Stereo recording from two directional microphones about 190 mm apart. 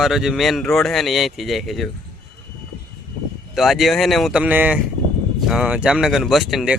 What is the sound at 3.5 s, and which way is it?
Speech, centre (ahead or behind).